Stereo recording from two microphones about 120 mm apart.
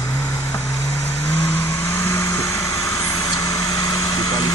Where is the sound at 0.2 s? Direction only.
25° left (ahead or behind).